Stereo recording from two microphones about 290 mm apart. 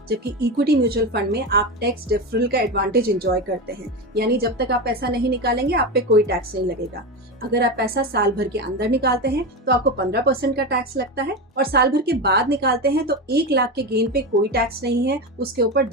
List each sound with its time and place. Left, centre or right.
0.1 s a woman's voice: right
4.1 s a woman's voice: right
7.5 s a woman's voice: right